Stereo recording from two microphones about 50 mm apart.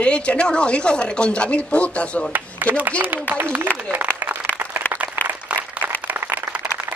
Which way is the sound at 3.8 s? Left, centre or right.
Right.